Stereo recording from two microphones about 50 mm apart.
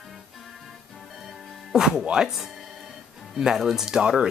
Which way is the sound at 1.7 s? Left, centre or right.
Centre.